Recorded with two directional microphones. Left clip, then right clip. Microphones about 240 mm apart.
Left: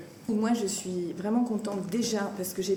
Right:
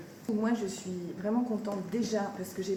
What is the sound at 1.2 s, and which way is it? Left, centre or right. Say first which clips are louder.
Speech: left 1 dB; left.